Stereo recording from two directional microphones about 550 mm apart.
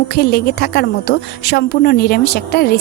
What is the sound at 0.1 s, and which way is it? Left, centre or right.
A woman's voice, centre.